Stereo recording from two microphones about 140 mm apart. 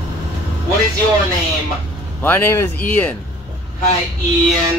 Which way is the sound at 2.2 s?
15° left (ahead or behind).